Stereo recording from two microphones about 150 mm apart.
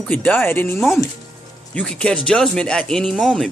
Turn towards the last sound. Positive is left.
turn(degrees=0)  # may be behind; listen again after turning